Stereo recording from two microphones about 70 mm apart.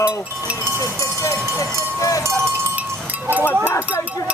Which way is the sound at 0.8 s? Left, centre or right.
Left.